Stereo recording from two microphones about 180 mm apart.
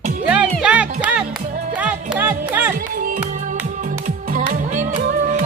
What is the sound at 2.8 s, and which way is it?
Music, 50° right (ahead or behind).